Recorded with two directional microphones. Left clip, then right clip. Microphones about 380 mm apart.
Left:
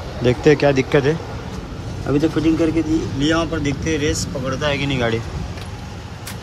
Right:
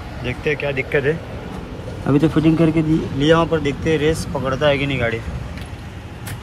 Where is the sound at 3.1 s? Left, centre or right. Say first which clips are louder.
Right 7 dB; centre.